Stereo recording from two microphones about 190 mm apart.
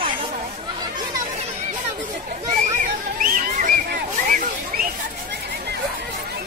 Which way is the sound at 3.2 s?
45° right (ahead or behind).